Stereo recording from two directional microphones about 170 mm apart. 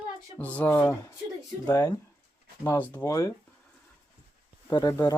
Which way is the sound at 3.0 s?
20° left (ahead or behind).